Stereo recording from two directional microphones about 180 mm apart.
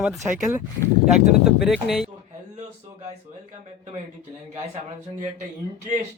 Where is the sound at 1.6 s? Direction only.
Centre (ahead or behind).